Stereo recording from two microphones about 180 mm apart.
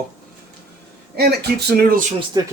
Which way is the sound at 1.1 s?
65° right (ahead or behind).